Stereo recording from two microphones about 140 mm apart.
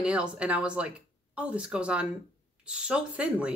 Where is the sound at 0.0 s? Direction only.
10° right (ahead or behind).